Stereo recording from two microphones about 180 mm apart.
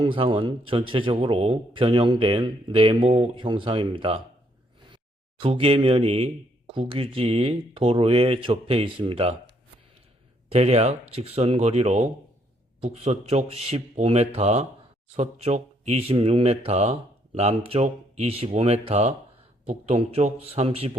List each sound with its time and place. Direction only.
0.0 s a man's voice: 30° right (ahead or behind)
5.4 s speech: 30° right (ahead or behind)
10.5 s speech: 35° right (ahead or behind)